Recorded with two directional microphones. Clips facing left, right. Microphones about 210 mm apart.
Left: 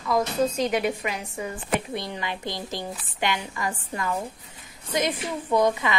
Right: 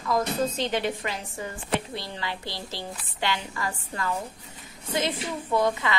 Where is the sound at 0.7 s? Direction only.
15° left (ahead or behind).